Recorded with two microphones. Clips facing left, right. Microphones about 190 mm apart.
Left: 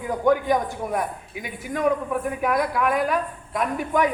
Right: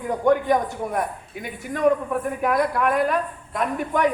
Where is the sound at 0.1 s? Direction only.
Centre (ahead or behind).